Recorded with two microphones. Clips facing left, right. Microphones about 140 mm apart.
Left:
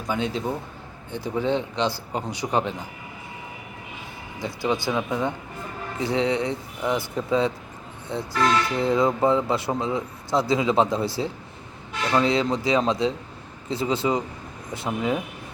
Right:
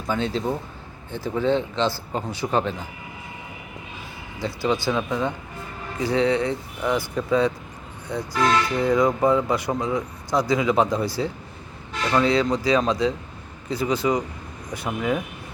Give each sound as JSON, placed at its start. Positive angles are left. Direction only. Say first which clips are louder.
{"t": 0.1, "sound": "a man's voice", "louder": "right 2 dB", "side_deg": 15}
{"t": 4.4, "sound": "a man's voice", "louder": "right 2 dB", "side_deg": 20}